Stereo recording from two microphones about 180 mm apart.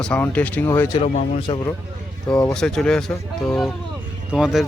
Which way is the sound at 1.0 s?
40° left (ahead or behind).